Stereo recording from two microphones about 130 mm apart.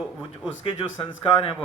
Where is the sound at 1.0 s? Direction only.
45° left (ahead or behind).